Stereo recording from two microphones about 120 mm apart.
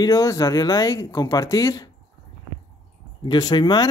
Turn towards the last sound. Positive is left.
turn(degrees=35)  # may be behind; listen again after turning